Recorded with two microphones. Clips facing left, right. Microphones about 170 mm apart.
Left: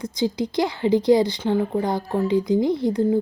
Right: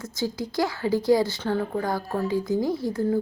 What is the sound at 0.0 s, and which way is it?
A woman's voice, 15° left (ahead or behind).